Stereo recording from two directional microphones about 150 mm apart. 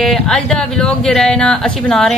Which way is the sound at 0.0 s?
5° left (ahead or behind).